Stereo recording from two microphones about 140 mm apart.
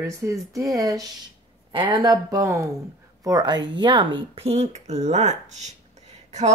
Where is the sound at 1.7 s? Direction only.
35° right (ahead or behind).